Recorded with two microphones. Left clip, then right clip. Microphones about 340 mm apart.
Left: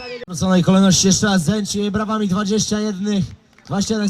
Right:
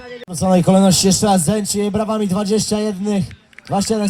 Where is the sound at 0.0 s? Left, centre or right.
Left.